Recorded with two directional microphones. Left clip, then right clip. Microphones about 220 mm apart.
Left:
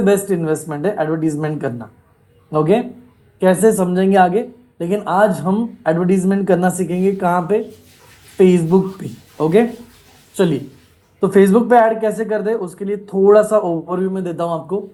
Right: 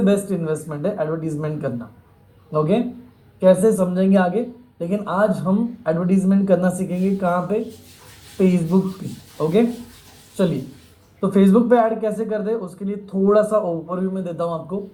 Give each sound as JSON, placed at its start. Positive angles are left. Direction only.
{"t": 0.0, "sound": "a woman's voice", "side_deg": 50}
{"t": 10.3, "sound": "a woman's voice", "side_deg": 55}